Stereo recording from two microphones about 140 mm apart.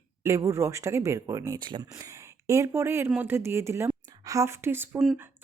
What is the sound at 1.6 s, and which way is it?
Speech, 35° right (ahead or behind).